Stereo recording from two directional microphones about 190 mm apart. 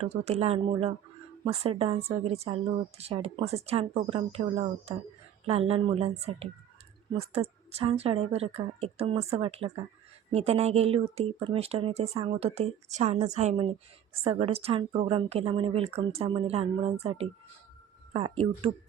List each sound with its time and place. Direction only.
0.0 s a woman's voice: 35° right (ahead or behind)